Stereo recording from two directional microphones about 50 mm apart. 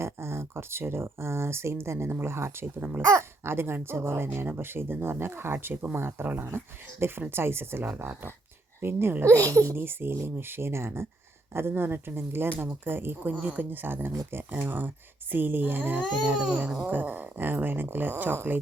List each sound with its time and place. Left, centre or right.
0.0 s speech: right
4.4 s speech: right
9.2 s speech: right
9.7 s speech: right
16.2 s speech: right
16.8 s speech: right